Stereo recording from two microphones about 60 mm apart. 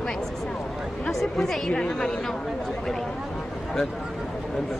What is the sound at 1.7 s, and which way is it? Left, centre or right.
Speech, centre.